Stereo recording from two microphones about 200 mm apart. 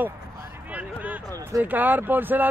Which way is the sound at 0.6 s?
5° right (ahead or behind).